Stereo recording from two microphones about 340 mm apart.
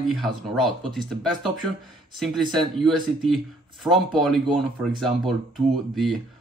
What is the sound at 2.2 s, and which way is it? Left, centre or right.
Speech, centre.